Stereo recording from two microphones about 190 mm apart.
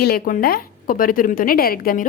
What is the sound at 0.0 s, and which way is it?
A woman's voice, 50° left (ahead or behind).